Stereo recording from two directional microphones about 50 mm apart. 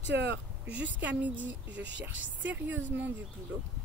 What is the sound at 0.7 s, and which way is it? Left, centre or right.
A woman's voice, right.